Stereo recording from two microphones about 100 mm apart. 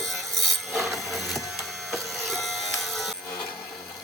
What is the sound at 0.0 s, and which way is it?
Wood, centre (ahead or behind).